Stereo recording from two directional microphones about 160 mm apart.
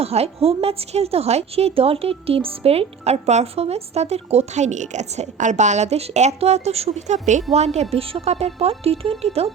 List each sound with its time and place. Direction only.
0.0 s a woman's voice: 40° right (ahead or behind)